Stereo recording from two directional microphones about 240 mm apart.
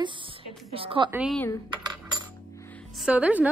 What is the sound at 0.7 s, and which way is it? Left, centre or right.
Speech, right.